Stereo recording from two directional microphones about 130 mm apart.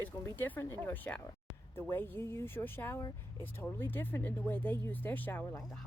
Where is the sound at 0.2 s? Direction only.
15° left (ahead or behind).